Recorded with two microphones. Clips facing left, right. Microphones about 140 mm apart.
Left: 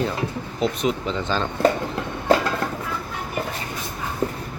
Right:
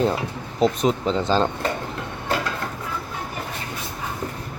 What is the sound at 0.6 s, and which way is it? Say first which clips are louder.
Speech: right 3 dB; 35° right (ahead or behind).